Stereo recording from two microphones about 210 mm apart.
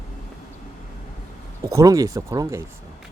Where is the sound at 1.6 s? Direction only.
15° right (ahead or behind).